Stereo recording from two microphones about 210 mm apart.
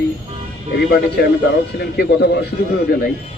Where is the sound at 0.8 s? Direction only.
50° left (ahead or behind).